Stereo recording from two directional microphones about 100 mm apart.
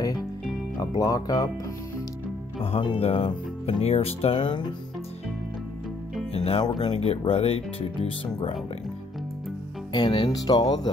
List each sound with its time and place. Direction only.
0.7 s speech: 35° left (ahead or behind)
2.6 s speech: 75° left (ahead or behind); by 4.6 s 55° left (ahead or behind)
6.3 s speech: 90° left
6.6 s speech: 45° left (ahead or behind)
6.9 s speech: 80° left
9.9 s speech: 55° left (ahead or behind)